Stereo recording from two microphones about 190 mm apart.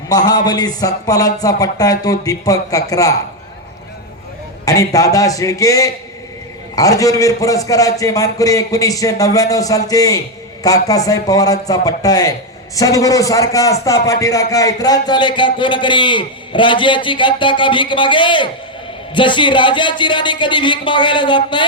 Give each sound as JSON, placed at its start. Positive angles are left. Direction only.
{"t": 0.1, "sound": "a man's voice", "side_deg": 20}
{"t": 4.6, "sound": "a man's voice", "side_deg": 20}